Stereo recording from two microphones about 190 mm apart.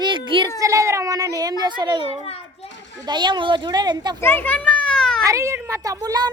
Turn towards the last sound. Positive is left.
turn(degrees=-20)  # may be behind; listen again after turning